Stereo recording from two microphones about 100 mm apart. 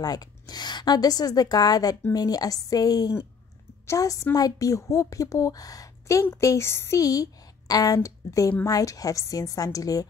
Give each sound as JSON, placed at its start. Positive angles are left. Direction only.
{"t": 0.0, "sound": "a woman's voice", "side_deg": 40}